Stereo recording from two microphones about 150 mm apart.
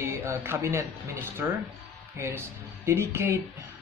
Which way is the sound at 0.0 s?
15° right (ahead or behind).